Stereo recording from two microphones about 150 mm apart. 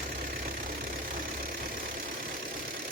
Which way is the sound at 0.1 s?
65° right (ahead or behind).